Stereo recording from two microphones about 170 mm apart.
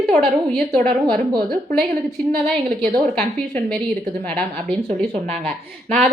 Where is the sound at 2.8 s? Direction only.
5° left (ahead or behind).